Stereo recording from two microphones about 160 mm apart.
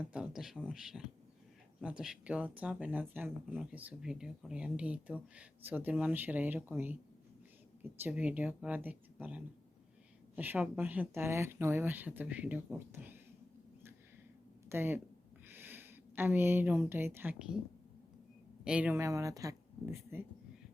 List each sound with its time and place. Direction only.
0.0 s speech: 5° right (ahead or behind)
14.7 s speech: 15° right (ahead or behind)
18.6 s speech: 5° right (ahead or behind)